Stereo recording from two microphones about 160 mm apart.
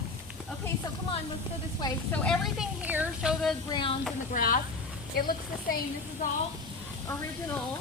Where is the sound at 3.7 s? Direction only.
30° left (ahead or behind).